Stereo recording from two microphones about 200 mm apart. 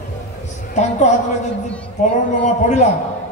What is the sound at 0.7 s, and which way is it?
Speech, 35° left (ahead or behind).